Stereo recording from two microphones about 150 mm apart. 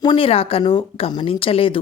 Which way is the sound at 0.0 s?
35° left (ahead or behind).